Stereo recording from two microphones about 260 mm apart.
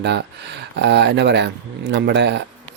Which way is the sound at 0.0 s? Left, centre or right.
Right.